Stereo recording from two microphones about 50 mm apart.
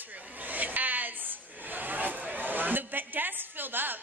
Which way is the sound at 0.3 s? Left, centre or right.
Right.